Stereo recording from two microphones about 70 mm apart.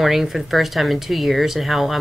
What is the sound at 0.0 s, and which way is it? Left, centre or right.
Speech, centre.